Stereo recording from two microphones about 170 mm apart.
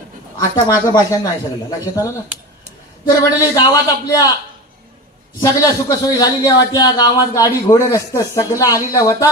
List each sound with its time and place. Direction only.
0.3 s a man's voice: 20° left (ahead or behind)
5.4 s a man's voice: 20° left (ahead or behind)